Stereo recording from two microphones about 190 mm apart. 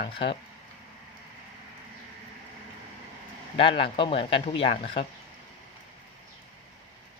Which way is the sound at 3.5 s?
30° left (ahead or behind).